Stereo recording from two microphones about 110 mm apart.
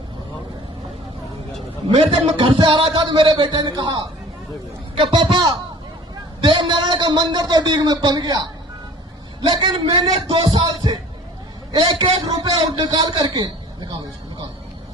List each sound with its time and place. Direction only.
1.9 s a man's voice: 70° right (ahead or behind)
2.3 s a man's voice: 50° right (ahead or behind)
9.5 s a man's voice: 45° right (ahead or behind)